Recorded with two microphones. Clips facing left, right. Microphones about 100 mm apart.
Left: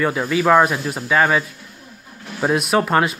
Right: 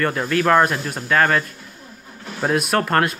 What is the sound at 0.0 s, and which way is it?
Speech, 5° left (ahead or behind).